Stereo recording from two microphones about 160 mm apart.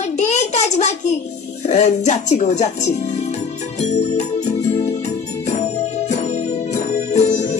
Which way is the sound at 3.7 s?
45° left (ahead or behind).